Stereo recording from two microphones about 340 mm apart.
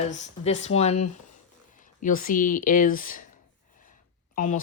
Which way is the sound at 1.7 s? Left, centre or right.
Left.